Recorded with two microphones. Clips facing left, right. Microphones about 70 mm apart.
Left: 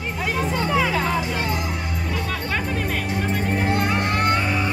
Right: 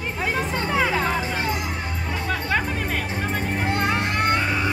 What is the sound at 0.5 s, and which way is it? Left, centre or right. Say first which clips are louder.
Music: left 2 dB; right.